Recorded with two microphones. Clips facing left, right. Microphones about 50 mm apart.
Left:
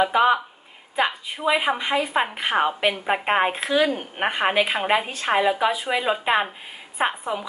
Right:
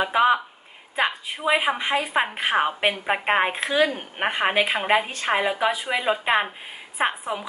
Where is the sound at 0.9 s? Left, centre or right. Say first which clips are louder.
Left 1 dB; centre.